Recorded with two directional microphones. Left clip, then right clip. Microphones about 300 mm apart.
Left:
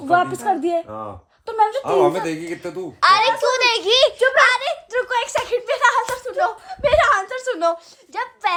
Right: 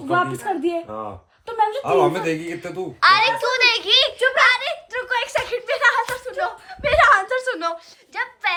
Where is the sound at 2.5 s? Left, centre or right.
Centre.